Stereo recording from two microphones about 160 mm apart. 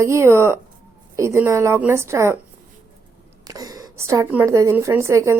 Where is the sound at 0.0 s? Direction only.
15° right (ahead or behind).